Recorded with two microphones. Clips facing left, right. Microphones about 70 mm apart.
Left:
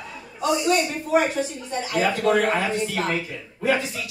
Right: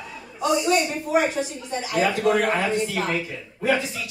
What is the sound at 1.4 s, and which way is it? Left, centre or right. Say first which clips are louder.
A man's voice: left 1 dB; centre.